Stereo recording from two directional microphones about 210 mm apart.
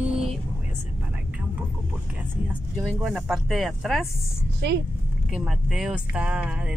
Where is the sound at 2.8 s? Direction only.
Centre (ahead or behind).